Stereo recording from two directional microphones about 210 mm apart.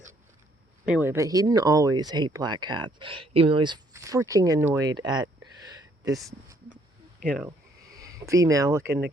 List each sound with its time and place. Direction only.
0.9 s speech: 10° right (ahead or behind)
7.3 s speech: 5° right (ahead or behind)